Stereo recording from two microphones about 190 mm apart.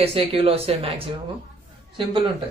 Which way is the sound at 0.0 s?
30° right (ahead or behind).